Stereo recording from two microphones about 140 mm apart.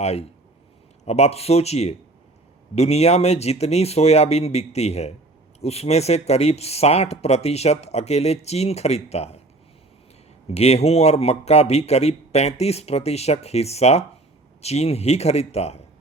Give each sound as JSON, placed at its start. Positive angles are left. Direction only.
{"t": 0.0, "sound": "speech", "side_deg": 50}
{"t": 10.5, "sound": "speech", "side_deg": 50}